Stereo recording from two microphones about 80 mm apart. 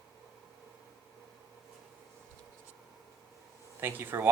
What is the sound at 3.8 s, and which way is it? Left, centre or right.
Speech, right.